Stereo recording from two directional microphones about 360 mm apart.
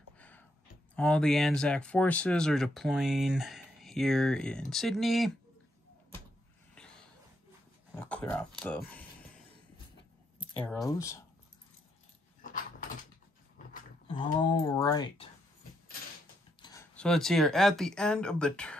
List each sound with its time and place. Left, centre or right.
0.2 s a sound: centre
0.9 s speech: centre
6.7 s a sound: centre
7.9 s speech: centre
10.6 s speech: centre
12.4 s dog: left
14.0 s speech: centre
16.6 s speech: centre